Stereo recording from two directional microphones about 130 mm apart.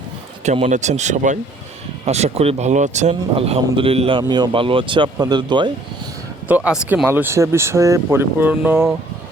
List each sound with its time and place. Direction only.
0.4 s a man's voice: 50° right (ahead or behind)
0.7 s speech: 65° right (ahead or behind)
2.0 s speech: 55° right (ahead or behind)
3.3 s a man's voice: 45° right (ahead or behind)
4.2 s speech: 35° right (ahead or behind)
6.8 s speech: 10° right (ahead or behind)